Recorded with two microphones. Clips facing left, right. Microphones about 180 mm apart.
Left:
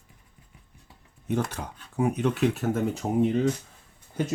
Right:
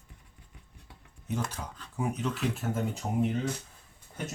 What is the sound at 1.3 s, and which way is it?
Speech, 65° left (ahead or behind).